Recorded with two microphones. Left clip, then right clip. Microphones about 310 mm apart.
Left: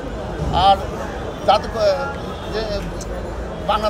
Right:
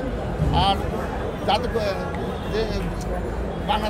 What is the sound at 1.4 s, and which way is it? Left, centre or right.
Speech, centre.